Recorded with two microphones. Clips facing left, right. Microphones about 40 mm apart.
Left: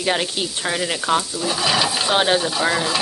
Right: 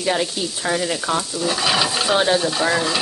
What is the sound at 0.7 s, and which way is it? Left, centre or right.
Frying, left.